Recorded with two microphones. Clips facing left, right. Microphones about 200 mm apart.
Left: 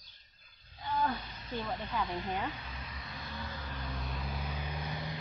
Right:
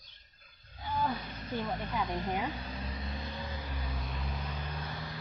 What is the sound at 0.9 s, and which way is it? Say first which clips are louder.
Speech: even; 10° right (ahead or behind).